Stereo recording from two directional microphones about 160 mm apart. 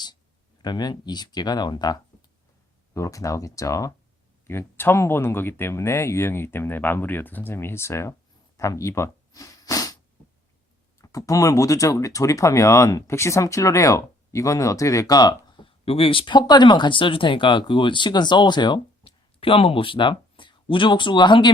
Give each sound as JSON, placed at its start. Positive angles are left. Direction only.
{"t": 0.6, "sound": "speech", "side_deg": 25}
{"t": 8.5, "sound": "snort", "side_deg": 20}
{"t": 11.0, "sound": "speech", "side_deg": 20}